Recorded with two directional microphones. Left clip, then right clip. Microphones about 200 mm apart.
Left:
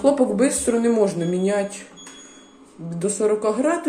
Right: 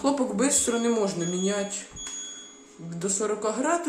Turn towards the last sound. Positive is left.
turn(degrees=5)  # may be behind; listen again after turning